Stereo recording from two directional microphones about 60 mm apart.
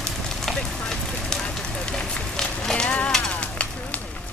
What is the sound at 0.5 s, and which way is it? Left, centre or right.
Fire, centre.